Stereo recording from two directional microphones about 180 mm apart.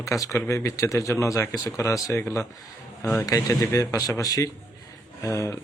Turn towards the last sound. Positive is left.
turn(degrees=15)  # may be behind; listen again after turning